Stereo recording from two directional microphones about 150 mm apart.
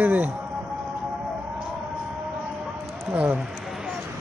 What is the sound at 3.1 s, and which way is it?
Speech, 10° right (ahead or behind).